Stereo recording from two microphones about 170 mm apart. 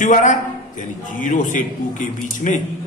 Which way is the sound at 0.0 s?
45° left (ahead or behind).